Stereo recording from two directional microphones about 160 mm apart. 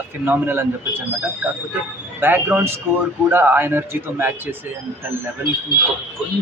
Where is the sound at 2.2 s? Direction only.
15° right (ahead or behind).